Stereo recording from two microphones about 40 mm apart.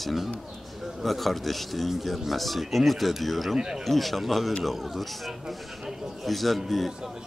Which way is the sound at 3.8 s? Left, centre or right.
Centre.